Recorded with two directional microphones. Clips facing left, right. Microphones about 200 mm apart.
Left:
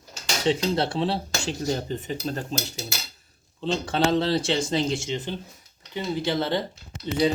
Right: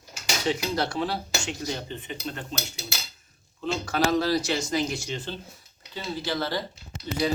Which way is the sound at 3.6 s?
30° left (ahead or behind).